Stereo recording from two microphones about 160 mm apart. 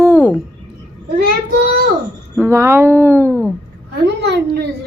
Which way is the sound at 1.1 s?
90° right.